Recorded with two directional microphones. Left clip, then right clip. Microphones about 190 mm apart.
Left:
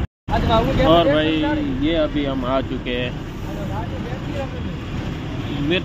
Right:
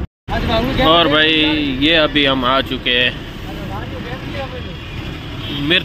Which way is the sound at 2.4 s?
Centre (ahead or behind).